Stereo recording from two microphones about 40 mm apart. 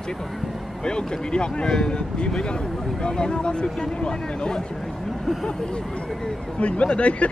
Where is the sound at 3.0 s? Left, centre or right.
Left.